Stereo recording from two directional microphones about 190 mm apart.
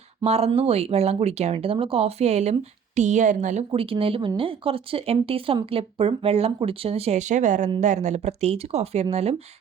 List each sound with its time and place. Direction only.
0.3 s speech: 30° right (ahead or behind)
3.7 s speech: 30° right (ahead or behind)